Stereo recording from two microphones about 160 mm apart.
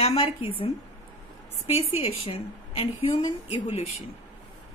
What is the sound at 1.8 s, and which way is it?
A woman's voice, 35° left (ahead or behind).